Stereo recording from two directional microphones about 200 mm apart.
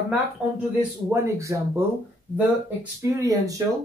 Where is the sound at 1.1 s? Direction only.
15° right (ahead or behind).